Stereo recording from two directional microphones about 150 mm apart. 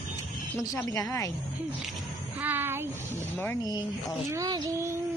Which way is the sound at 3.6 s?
25° left (ahead or behind).